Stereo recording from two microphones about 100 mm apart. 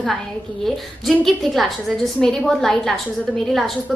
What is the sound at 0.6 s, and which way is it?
A woman's voice, centre (ahead or behind).